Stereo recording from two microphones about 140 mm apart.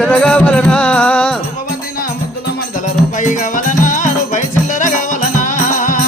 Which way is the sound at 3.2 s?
65° left (ahead or behind).